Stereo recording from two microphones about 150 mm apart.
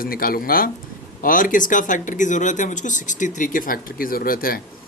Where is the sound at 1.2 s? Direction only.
65° left (ahead or behind).